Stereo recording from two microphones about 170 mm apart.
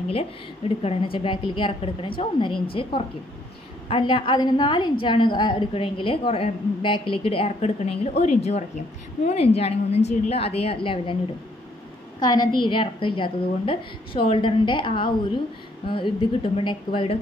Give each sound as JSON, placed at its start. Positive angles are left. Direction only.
{"t": 0.8, "sound": "a woman's voice", "side_deg": 30}
{"t": 12.2, "sound": "a woman's voice", "side_deg": 25}